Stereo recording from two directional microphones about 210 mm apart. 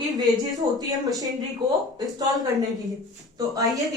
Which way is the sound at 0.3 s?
20° right (ahead or behind).